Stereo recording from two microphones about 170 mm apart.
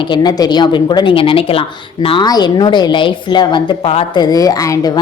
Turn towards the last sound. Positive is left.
turn(degrees=20)  # may be behind; listen again after turning